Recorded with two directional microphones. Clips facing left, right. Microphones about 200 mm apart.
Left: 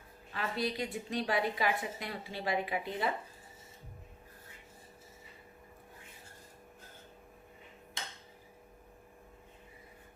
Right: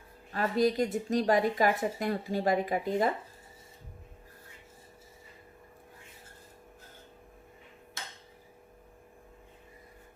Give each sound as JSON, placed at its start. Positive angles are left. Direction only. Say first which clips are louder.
{"t": 0.3, "sound": "speech", "louder": "right 9 dB", "side_deg": -45}